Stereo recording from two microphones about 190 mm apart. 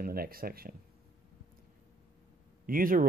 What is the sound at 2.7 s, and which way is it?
Speech, 50° right (ahead or behind).